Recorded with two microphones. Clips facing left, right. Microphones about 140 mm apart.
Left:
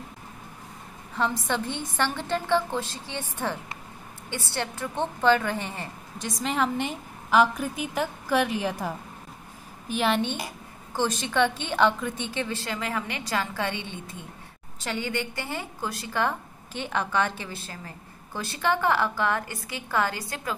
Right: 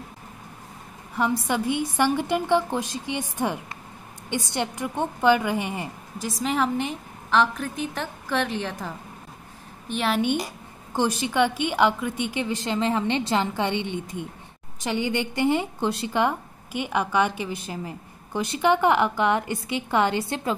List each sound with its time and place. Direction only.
1.1 s a woman's voice: 10° right (ahead or behind)
6.2 s a woman's voice: centre (ahead or behind)
10.9 s a woman's voice: 15° right (ahead or behind)